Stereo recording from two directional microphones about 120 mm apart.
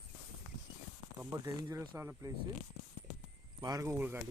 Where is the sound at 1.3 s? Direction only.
25° right (ahead or behind).